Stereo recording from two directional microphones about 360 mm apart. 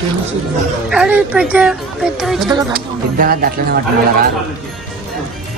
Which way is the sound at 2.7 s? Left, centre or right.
Right.